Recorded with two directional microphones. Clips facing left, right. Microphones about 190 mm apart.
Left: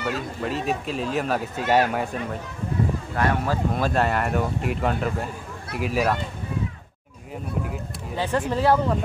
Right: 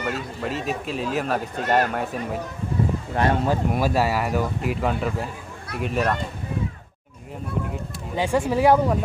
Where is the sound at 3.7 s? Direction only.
5° right (ahead or behind).